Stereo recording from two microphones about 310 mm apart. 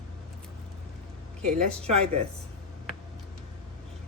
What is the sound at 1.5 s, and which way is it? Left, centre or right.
Speech, centre.